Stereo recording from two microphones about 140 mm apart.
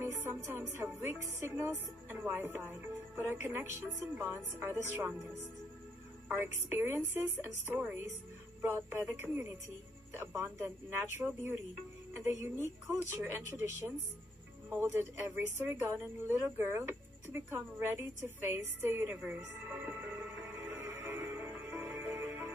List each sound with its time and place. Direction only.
0.0 s music: 20° right (ahead or behind)
0.7 s speech: 15° right (ahead or behind)
6.2 s speech: 15° right (ahead or behind)
14.7 s speech: 15° right (ahead or behind)
20.7 s music: 15° right (ahead or behind)